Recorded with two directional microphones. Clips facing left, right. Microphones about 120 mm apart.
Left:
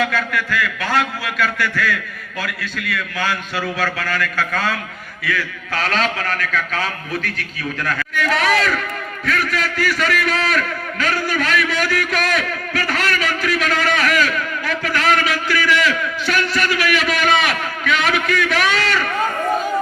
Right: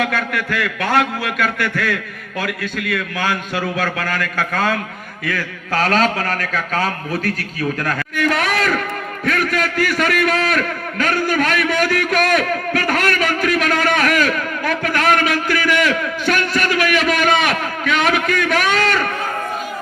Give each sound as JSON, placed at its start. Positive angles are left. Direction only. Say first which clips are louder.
{"t": 0.0, "sound": "a man's voice", "louder": "even", "side_deg": -55}